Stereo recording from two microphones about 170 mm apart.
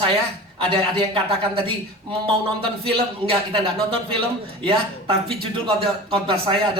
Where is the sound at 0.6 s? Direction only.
30° right (ahead or behind).